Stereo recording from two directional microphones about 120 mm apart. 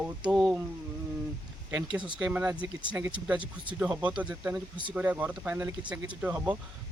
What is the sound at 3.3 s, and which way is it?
Speech, 45° right (ahead or behind).